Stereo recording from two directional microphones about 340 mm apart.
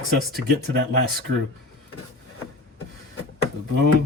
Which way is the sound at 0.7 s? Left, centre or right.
Right.